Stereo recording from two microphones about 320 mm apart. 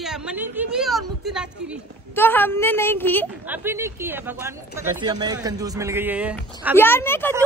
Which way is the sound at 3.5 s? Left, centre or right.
Centre.